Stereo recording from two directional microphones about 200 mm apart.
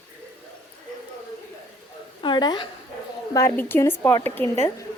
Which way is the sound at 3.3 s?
15° left (ahead or behind).